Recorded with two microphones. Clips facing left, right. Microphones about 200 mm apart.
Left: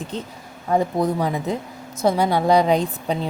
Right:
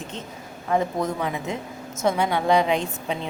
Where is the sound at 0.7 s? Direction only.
35° left (ahead or behind).